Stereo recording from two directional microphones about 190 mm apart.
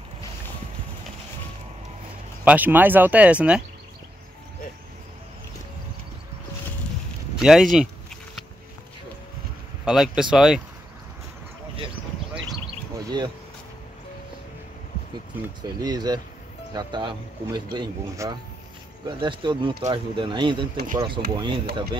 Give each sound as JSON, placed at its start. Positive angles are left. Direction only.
{"t": 2.4, "sound": "speech", "side_deg": -10}
{"t": 7.3, "sound": "speech", "side_deg": -5}
{"t": 9.8, "sound": "speech", "side_deg": 0}
{"t": 13.1, "sound": "speech", "side_deg": -25}
{"t": 15.6, "sound": "speech", "side_deg": -20}
{"t": 20.7, "sound": "speech", "side_deg": -45}
{"t": 21.4, "sound": "speech", "side_deg": -25}